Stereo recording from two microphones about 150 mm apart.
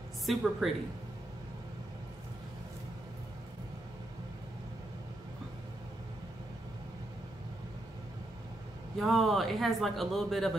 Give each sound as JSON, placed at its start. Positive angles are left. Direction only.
{"t": 0.3, "sound": "speech", "side_deg": 0}
{"t": 8.9, "sound": "speech", "side_deg": 0}